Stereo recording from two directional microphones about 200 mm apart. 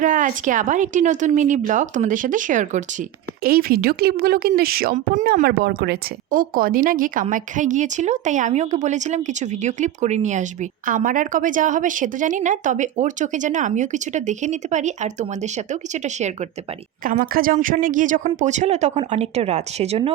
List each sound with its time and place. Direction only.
0.0 s a woman's voice: 40° right (ahead or behind)